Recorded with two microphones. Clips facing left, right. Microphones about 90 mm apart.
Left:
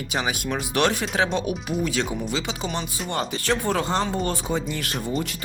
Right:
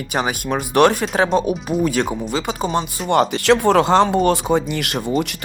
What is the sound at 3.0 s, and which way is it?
Speech, 70° right (ahead or behind).